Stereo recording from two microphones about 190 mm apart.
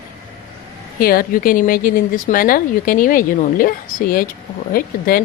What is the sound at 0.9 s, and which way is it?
Speech, 50° left (ahead or behind).